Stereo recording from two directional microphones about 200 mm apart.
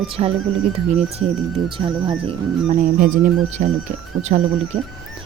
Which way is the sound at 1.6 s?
25° right (ahead or behind).